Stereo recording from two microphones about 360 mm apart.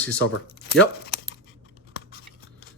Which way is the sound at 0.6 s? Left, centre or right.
Left.